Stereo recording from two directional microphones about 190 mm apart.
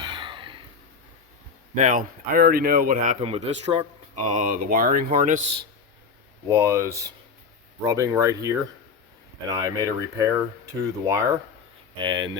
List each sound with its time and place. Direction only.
0.0 s a sound: 25° right (ahead or behind)
1.7 s speech: 45° right (ahead or behind)
3.2 s speech: 30° right (ahead or behind)
4.2 s speech: 40° right (ahead or behind)
6.5 s speech: 15° right (ahead or behind)